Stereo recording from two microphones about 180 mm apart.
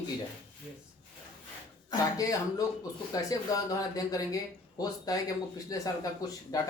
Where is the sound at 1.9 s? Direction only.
20° left (ahead or behind).